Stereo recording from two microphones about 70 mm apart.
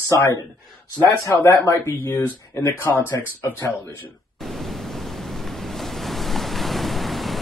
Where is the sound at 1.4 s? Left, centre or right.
Left.